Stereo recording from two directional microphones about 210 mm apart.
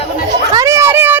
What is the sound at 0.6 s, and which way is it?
Children playing, 15° right (ahead or behind).